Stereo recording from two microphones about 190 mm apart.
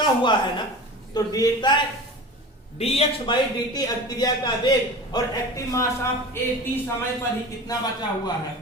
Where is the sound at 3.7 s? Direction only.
20° left (ahead or behind).